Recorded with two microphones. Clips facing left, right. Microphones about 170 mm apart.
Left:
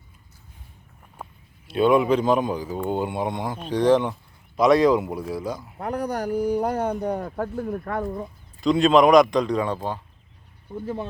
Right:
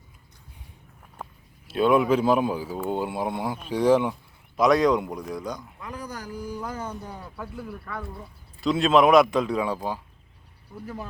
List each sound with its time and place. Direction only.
1.1 s speech: centre (ahead or behind)
5.7 s speech: 65° left (ahead or behind)
7.3 s speech: 45° left (ahead or behind)
8.6 s speech: centre (ahead or behind)